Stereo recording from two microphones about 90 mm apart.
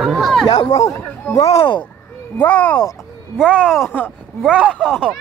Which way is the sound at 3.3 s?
5° right (ahead or behind).